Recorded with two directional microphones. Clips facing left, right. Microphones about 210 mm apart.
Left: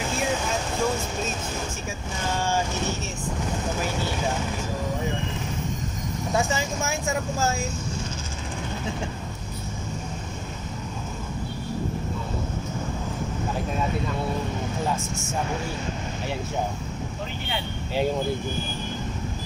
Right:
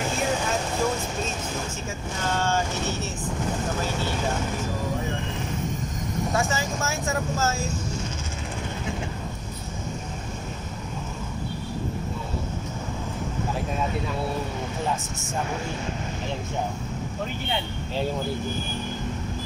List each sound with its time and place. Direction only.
6.3 s speech: 15° left (ahead or behind)